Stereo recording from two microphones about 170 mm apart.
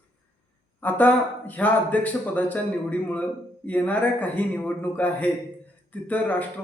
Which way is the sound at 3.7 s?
10° left (ahead or behind).